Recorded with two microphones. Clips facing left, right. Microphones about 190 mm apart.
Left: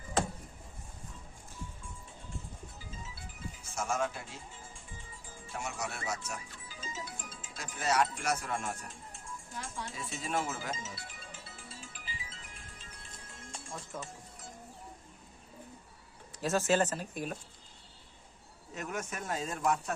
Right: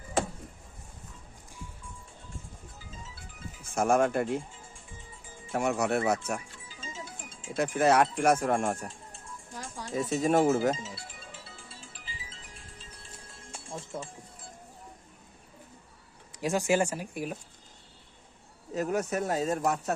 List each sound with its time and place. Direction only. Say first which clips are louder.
3.6 s speech: right 10 dB; 55° right (ahead or behind)
5.5 s speech: right 12 dB; 60° right (ahead or behind)
6.7 s music: left 2 dB; 25° right (ahead or behind)
7.5 s speech: right 9 dB; 60° right (ahead or behind)
9.6 s speech: right 9 dB; 35° right (ahead or behind)
11.4 s music: even; 30° right (ahead or behind)
16.4 s speech: right 2 dB; 15° right (ahead or behind)
18.7 s speech: right 10 dB; 35° right (ahead or behind)